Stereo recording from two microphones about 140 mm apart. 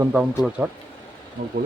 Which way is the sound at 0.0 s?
10° right (ahead or behind).